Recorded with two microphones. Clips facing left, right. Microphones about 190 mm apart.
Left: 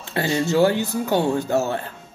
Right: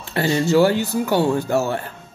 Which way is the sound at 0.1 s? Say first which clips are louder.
Right 3 dB; 20° left (ahead or behind).